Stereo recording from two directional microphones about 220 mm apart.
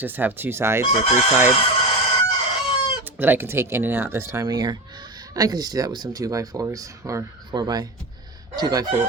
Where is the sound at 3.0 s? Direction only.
10° right (ahead or behind).